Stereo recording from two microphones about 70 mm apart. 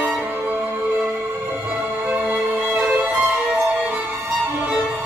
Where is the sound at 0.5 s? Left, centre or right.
Centre.